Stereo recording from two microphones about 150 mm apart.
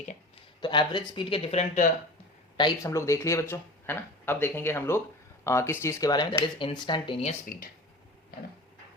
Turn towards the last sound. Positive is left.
turn(degrees=70)  # may be behind; listen again after turning